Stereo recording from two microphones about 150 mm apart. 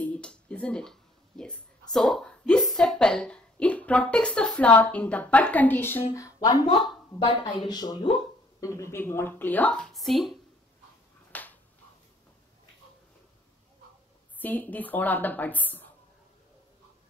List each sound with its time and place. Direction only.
0.0 s a woman's voice: 10° left (ahead or behind)
11.3 s finger snapping: 10° left (ahead or behind)
14.4 s a woman's voice: 10° left (ahead or behind)